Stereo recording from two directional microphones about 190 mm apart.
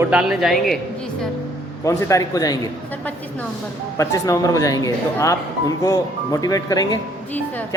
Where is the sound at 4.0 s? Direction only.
15° left (ahead or behind).